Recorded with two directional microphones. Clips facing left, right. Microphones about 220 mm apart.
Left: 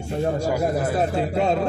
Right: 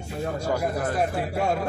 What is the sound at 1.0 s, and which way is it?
Speech, 25° left (ahead or behind).